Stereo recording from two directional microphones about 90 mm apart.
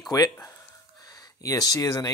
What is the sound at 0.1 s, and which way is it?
Speech, 45° left (ahead or behind).